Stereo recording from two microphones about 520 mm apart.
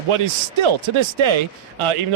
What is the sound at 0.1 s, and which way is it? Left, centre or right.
Speech, right.